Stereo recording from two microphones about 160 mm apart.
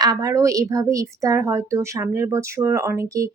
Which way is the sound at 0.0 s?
25° right (ahead or behind).